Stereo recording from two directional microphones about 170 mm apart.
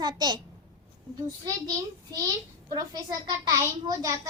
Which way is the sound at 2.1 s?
20° right (ahead or behind).